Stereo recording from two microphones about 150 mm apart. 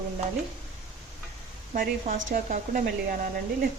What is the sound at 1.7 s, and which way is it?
A woman's voice, 70° right (ahead or behind).